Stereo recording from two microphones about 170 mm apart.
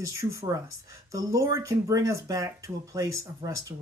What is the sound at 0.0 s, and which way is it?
Speech, 20° right (ahead or behind).